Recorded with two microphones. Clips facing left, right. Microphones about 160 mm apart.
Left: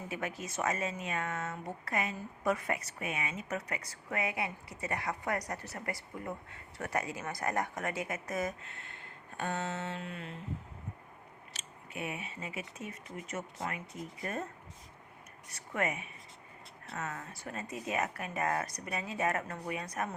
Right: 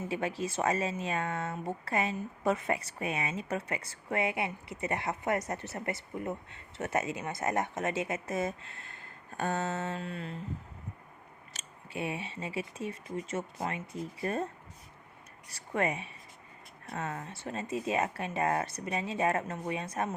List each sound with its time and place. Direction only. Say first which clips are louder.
0.1 s speech: right 5 dB; 30° right (ahead or behind)
11.6 s a sound: right 1 dB; 45° right (ahead or behind)
11.9 s speech: right 4 dB; 30° right (ahead or behind)
15.5 s speech: right 3 dB; 30° right (ahead or behind)